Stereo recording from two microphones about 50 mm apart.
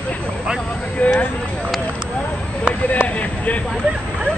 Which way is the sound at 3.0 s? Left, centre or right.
Left.